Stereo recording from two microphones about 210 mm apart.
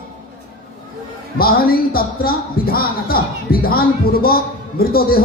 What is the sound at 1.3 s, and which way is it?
Speech, 45° left (ahead or behind).